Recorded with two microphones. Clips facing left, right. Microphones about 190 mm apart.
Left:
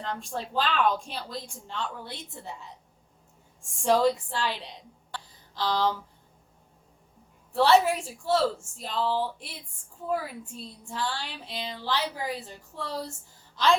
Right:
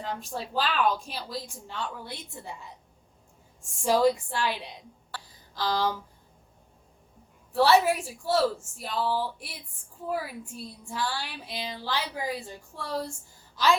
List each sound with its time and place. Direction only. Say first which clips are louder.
0.0 s speech: even; 5° right (ahead or behind)
5.1 s a sound: left 1 dB; 10° right (ahead or behind)
7.5 s speech: even; 10° right (ahead or behind)